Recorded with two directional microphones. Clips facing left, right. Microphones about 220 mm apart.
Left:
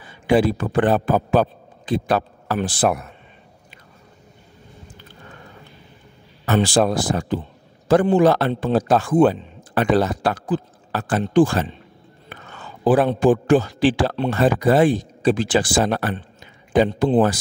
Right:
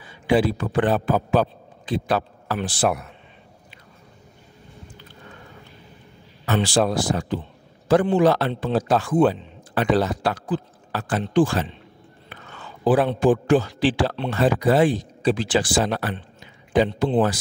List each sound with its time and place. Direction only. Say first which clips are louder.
0.0 s a man's voice: left 2 dB; 50° left (ahead or behind)
6.4 s a man's voice: left 3 dB; 45° left (ahead or behind)
12.8 s a man's voice: left 2 dB; 45° left (ahead or behind)